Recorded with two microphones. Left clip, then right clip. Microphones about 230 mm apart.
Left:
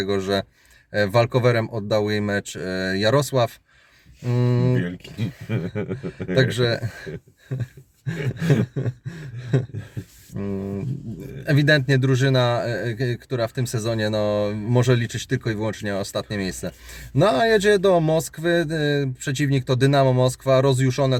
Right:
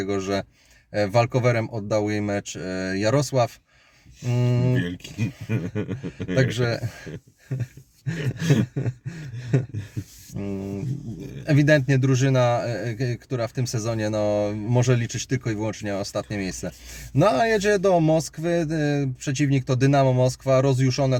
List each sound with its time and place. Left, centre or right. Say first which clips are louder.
0.9 s speech: left 2 dB; left
5.5 s speech: left 3 dB; centre
6.3 s speech: left 3 dB; centre